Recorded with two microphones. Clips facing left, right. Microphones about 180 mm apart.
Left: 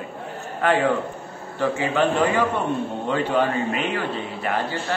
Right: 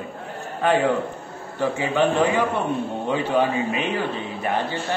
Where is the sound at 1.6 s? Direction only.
15° right (ahead or behind).